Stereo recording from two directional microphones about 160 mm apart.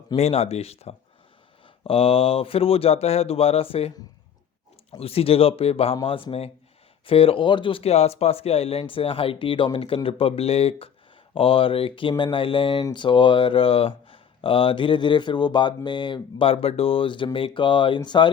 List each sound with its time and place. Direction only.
0.2 s speech: 40° left (ahead or behind)